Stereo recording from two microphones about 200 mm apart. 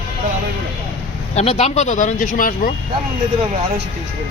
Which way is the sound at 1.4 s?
30° left (ahead or behind).